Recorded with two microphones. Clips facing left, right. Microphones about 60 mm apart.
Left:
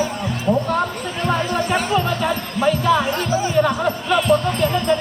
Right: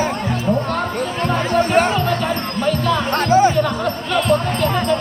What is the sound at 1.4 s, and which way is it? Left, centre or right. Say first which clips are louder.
Music: right 5 dB; right.